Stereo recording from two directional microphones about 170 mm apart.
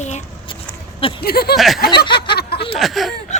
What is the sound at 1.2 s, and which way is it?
Speech, 65° left (ahead or behind).